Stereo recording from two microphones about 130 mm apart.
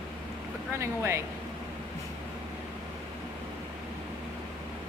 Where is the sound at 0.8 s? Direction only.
20° right (ahead or behind).